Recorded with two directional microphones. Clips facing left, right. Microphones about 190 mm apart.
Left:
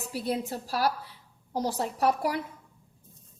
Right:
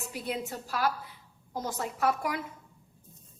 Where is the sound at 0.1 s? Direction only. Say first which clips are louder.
Left 5 dB; 35° left (ahead or behind).